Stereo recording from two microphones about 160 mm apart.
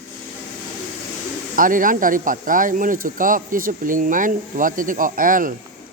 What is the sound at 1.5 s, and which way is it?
Speech, 55° right (ahead or behind).